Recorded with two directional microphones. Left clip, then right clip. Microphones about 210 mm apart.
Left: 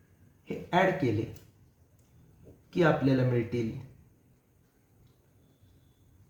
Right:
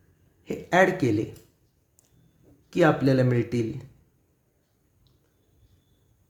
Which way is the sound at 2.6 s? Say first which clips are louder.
Right 5 dB; 55° right (ahead or behind).